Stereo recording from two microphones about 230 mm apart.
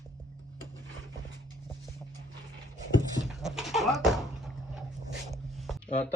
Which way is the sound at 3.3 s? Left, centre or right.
Centre.